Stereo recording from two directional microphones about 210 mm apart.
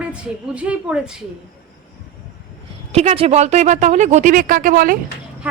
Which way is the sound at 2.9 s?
30° right (ahead or behind).